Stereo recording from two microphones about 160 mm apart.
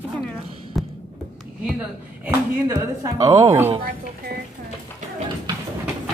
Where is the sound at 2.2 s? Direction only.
15° right (ahead or behind).